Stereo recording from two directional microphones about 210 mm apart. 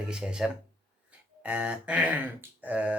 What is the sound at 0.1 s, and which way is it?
Speech, 5° right (ahead or behind).